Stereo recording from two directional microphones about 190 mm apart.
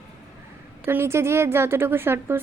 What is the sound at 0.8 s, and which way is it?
A woman's voice, 15° right (ahead or behind).